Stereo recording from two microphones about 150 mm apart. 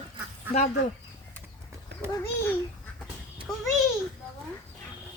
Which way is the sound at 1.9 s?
90° right.